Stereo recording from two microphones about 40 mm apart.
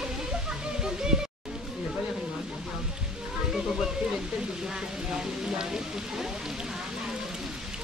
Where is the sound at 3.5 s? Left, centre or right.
Centre.